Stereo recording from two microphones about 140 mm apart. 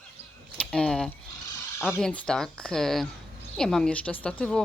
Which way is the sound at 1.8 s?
Centre (ahead or behind).